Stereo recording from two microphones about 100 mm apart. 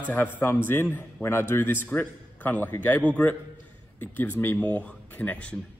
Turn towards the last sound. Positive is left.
turn(degrees=15)  # may be behind; listen again after turning